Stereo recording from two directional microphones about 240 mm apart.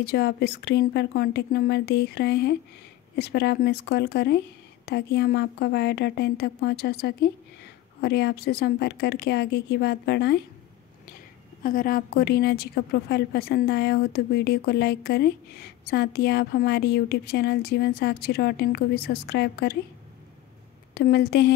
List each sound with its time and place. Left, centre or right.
0.0 s speech: left
11.6 s a woman's voice: left
20.9 s a woman's voice: left